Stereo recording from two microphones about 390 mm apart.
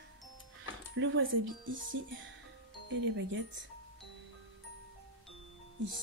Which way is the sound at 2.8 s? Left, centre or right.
Right.